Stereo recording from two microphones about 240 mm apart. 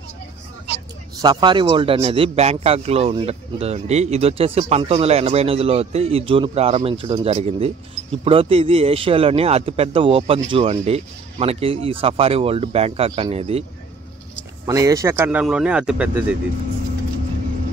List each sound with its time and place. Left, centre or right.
1.2 s speech: centre
14.7 s speech: centre